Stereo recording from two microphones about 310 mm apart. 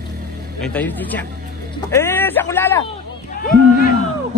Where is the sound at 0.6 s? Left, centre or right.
Centre.